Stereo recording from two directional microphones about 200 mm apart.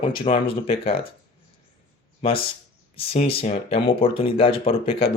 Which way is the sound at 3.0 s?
30° left (ahead or behind).